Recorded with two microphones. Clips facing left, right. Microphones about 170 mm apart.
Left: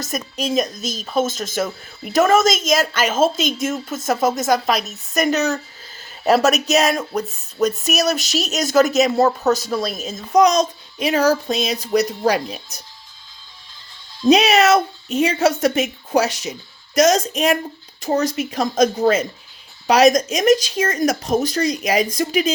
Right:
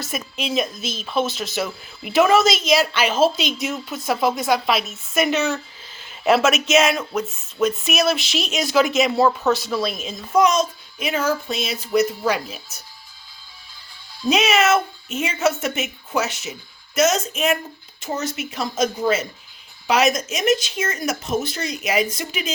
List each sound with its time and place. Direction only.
0.0 s a woman's voice: 40° left (ahead or behind)
14.3 s speech: 35° left (ahead or behind)